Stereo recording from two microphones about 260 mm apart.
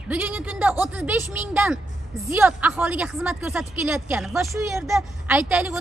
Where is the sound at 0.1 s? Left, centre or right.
Centre.